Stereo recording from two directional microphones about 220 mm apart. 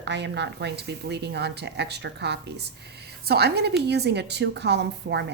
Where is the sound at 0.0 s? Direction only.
50° right (ahead or behind).